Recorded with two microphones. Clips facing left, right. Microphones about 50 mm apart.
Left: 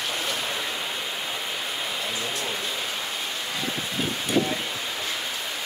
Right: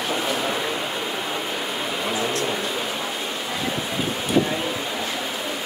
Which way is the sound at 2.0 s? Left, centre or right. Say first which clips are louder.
Right 6 dB; right.